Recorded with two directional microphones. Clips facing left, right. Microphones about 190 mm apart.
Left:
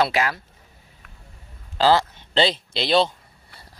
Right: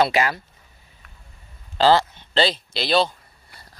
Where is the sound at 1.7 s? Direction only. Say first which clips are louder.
Right 1 dB; 5° left (ahead or behind).